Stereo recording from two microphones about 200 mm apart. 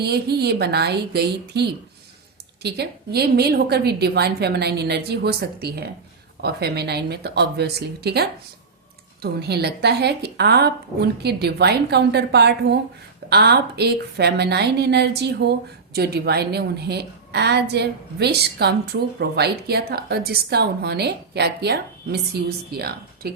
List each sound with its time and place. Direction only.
0.0 s a woman's voice: 55° right (ahead or behind)